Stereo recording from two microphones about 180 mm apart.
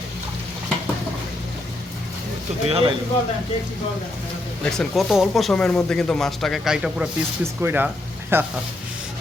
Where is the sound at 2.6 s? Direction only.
35° right (ahead or behind).